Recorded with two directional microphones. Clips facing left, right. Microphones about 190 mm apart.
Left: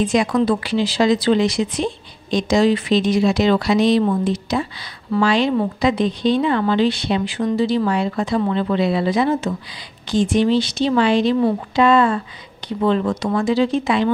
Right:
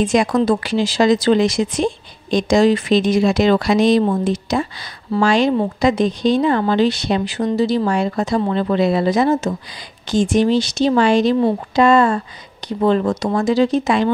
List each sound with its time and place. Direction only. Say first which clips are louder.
0.0 s speech: right 2 dB; 45° right (ahead or behind)